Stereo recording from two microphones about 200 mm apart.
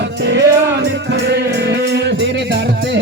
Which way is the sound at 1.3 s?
55° right (ahead or behind).